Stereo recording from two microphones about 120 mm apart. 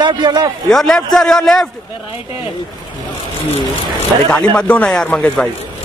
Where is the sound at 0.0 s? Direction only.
40° right (ahead or behind).